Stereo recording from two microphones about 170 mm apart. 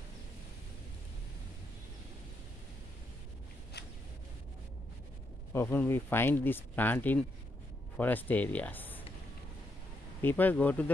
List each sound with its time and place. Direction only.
3.8 s a sound: 75° left (ahead or behind)
5.5 s speech: 15° left (ahead or behind)
10.2 s speech: 10° left (ahead or behind)